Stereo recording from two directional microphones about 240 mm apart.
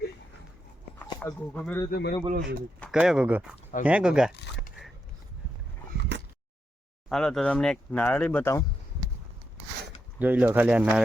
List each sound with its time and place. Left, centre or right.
0.9 s speech: centre
1.9 s speech: left
2.3 s speech: right
2.8 s speech: centre
4.4 s speech: left
7.1 s speech: centre
10.2 s speech: centre